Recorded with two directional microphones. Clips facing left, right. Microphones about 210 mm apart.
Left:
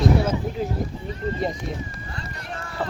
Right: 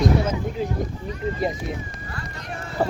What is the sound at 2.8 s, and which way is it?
Speech, 40° right (ahead or behind).